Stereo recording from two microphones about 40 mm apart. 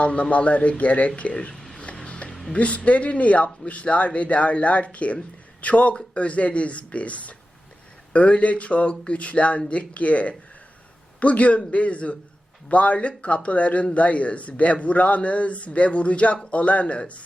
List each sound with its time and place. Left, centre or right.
0.0 s a man's voice: left
2.0 s music: left
2.5 s a man's voice: left